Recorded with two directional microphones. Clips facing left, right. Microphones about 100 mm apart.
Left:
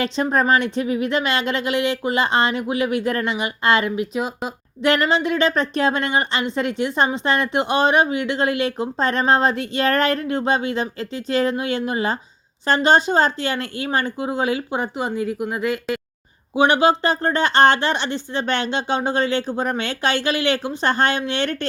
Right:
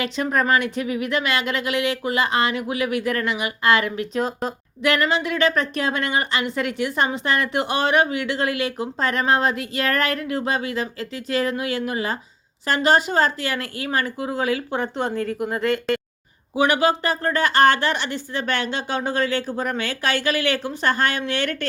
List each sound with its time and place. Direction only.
0.0 s a woman's voice: 30° left (ahead or behind)
4.1 s speech: 5° left (ahead or behind)
4.8 s a woman's voice: 25° left (ahead or behind)
14.9 s speech: 5° left (ahead or behind)
16.6 s a woman's voice: 25° left (ahead or behind)